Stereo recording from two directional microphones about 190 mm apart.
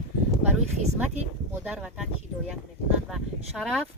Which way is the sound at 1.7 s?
5° right (ahead or behind).